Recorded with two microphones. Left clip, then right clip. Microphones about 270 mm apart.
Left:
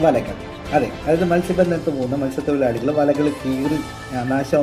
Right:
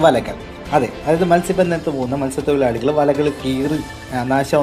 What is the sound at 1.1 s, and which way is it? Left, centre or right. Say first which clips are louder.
Speech: right 4 dB; centre.